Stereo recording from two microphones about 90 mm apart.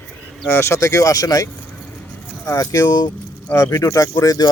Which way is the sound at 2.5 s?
40° left (ahead or behind).